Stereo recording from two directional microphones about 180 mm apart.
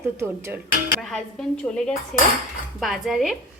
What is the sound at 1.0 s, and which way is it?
A woman's voice, 5° left (ahead or behind).